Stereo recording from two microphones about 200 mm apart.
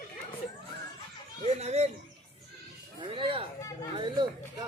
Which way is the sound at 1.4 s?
35° right (ahead or behind).